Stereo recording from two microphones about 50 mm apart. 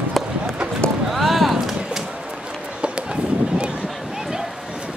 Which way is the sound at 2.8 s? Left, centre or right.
Right.